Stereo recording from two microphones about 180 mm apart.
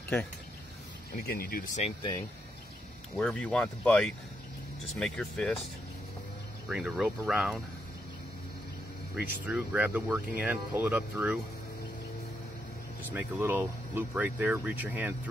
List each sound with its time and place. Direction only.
1.1 s speech: 55° left (ahead or behind)
3.2 s speech: 5° left (ahead or behind)
6.7 s speech: 5° right (ahead or behind)
9.1 s speech: 5° right (ahead or behind)
13.1 s speech: 10° right (ahead or behind)